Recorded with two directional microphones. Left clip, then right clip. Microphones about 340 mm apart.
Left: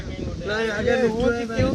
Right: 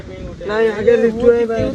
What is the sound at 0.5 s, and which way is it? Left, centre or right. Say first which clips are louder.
Speech: right 9 dB; centre.